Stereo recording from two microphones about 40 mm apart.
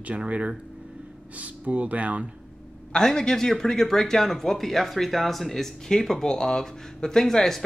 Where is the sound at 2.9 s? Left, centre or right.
Centre.